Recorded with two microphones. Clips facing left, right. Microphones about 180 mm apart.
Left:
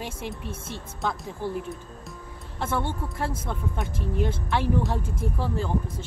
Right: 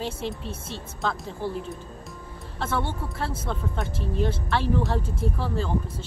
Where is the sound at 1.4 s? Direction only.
15° left (ahead or behind).